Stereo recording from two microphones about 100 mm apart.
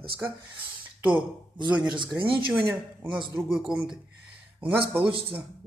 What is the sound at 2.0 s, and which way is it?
Speech, 55° right (ahead or behind).